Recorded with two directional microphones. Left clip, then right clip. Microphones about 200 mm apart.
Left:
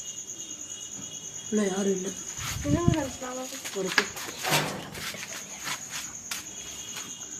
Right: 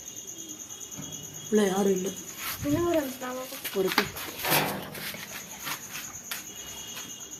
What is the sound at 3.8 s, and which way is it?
Speech, 65° right (ahead or behind).